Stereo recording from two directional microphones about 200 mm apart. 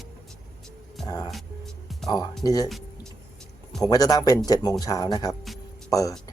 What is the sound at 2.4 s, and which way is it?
Speech, 20° left (ahead or behind).